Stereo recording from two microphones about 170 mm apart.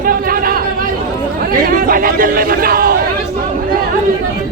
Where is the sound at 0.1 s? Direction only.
60° right (ahead or behind).